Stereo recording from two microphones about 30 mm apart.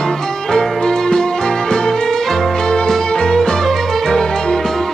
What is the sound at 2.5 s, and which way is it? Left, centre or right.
Music, left.